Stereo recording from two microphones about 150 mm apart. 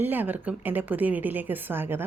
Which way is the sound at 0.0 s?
10° right (ahead or behind).